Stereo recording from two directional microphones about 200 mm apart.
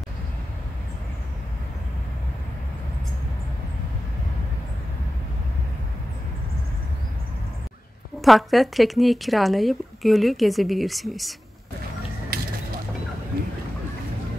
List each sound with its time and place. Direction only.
8.2 s speech: centre (ahead or behind)
12.3 s mechanisms: 50° right (ahead or behind)